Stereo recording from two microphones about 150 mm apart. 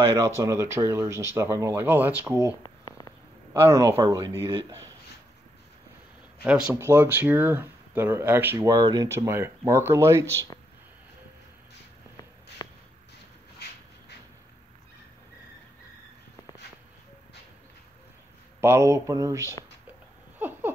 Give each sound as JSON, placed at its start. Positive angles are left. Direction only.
{"t": 0.1, "sound": "speech", "side_deg": -20}
{"t": 2.6, "sound": "a sound", "side_deg": 30}
{"t": 3.6, "sound": "speech", "side_deg": -20}
{"t": 4.5, "sound": "speech", "side_deg": -35}
{"t": 6.4, "sound": "speech", "side_deg": -10}
{"t": 18.6, "sound": "speech", "side_deg": -15}
{"t": 20.3, "sound": "a sound", "side_deg": -10}